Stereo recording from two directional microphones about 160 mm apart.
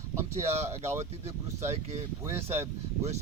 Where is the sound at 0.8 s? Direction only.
45° right (ahead or behind).